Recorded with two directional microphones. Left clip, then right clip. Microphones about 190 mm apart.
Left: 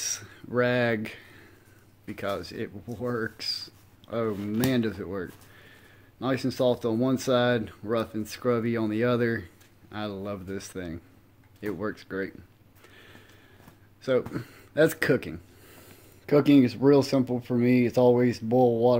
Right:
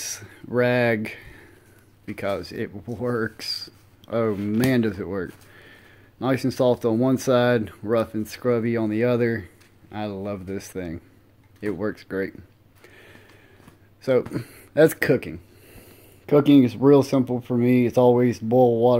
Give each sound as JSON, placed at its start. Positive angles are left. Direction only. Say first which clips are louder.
{"t": 0.0, "sound": "a sound", "louder": "left 1 dB", "side_deg": -20}
{"t": 2.0, "sound": "speech", "louder": "right 4 dB", "side_deg": -20}
{"t": 4.4, "sound": "speech", "louder": "right 5 dB", "side_deg": -10}
{"t": 4.6, "sound": "speech", "louder": "right 4 dB", "side_deg": -25}
{"t": 12.8, "sound": "a sound", "louder": "right 3 dB", "side_deg": -20}
{"t": 14.0, "sound": "speech", "louder": "right 5 dB", "side_deg": -20}